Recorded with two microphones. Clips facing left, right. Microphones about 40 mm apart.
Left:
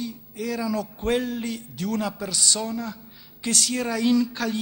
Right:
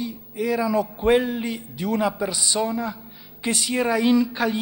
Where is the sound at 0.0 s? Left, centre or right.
Centre.